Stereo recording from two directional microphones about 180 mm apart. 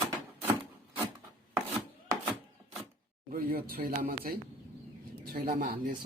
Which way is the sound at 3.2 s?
50° right (ahead or behind).